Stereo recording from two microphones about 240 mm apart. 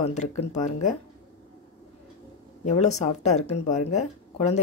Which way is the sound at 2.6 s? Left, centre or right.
Left.